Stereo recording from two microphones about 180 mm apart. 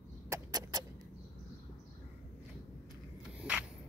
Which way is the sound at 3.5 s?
5° right (ahead or behind).